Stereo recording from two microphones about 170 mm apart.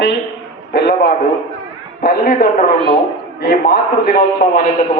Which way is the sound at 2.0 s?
55° left (ahead or behind).